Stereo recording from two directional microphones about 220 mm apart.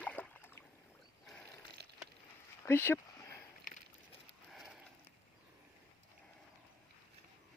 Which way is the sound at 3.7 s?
40° left (ahead or behind).